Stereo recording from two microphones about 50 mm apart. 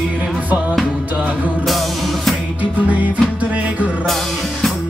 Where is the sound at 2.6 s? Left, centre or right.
Right.